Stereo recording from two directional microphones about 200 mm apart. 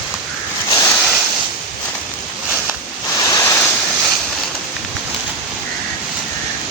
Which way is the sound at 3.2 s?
15° left (ahead or behind).